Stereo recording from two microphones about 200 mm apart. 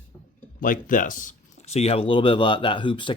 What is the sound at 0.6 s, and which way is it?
Speech, 45° left (ahead or behind).